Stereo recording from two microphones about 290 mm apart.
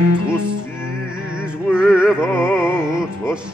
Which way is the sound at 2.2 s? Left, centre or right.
Centre.